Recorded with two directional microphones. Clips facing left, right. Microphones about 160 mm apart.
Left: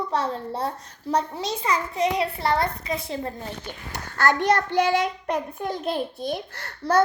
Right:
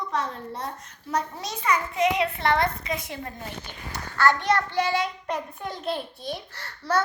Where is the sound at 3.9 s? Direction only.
45° left (ahead or behind).